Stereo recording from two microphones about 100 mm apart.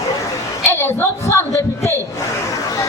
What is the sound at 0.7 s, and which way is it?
A woman's voice, 25° left (ahead or behind).